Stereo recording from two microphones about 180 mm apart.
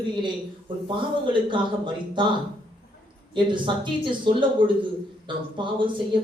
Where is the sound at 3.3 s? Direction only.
25° right (ahead or behind).